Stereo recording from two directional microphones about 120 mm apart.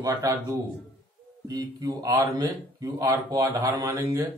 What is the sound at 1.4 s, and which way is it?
Speech, 30° right (ahead or behind).